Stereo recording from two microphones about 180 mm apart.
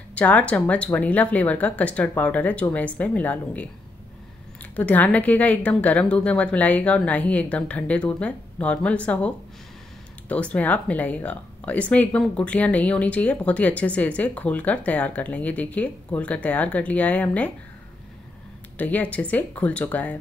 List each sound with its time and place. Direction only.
0.1 s speech: 10° left (ahead or behind)
4.7 s speech: 10° left (ahead or behind)
18.8 s speech: 10° left (ahead or behind)